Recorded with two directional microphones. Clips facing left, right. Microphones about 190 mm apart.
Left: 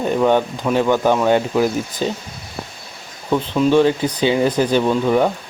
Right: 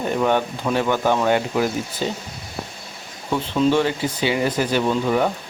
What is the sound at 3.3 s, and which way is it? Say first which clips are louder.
Speech: left 4 dB; 15° left (ahead or behind).